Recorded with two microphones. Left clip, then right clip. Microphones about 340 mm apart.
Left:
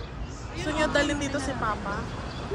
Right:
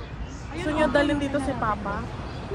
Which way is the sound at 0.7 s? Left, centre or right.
Centre.